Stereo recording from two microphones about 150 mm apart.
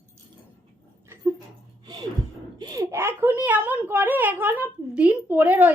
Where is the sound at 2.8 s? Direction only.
15° right (ahead or behind).